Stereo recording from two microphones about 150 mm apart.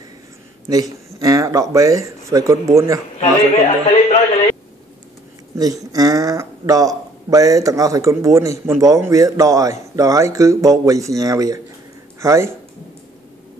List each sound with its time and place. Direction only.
0.7 s speech: 25° right (ahead or behind)
3.2 s a man's voice: 45° left (ahead or behind)
5.6 s speech: 25° right (ahead or behind)